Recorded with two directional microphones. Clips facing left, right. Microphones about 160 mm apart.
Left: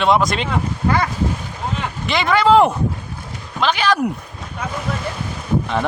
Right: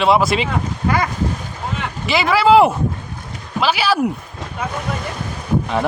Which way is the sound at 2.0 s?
5° right (ahead or behind).